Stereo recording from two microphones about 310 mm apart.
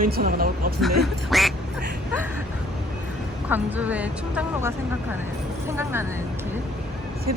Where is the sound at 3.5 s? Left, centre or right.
Centre.